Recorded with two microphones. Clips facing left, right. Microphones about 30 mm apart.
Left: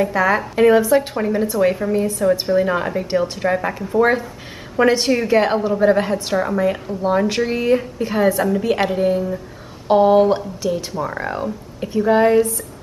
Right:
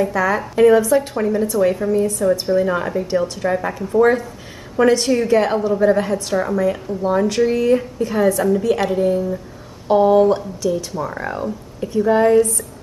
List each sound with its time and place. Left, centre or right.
0.0 s a woman's voice: centre